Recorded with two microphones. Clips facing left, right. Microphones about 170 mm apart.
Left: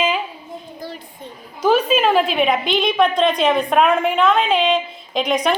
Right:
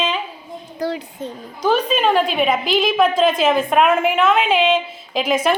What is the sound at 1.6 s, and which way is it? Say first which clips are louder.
A woman's voice: left 2 dB; 5° left (ahead or behind).